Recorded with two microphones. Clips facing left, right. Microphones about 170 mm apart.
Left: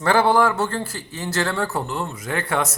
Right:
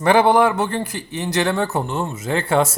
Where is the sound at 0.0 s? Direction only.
20° right (ahead or behind).